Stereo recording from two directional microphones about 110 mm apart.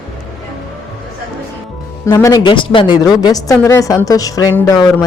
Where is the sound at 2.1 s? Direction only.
35° left (ahead or behind).